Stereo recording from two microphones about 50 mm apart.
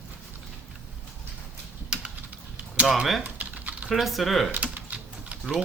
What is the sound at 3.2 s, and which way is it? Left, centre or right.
Typing, right.